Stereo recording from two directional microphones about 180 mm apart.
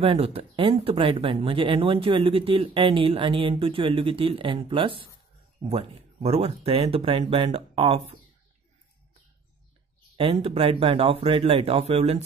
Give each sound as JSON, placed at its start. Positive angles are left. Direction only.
{"t": 0.0, "sound": "speech", "side_deg": -30}
{"t": 10.1, "sound": "speech", "side_deg": -30}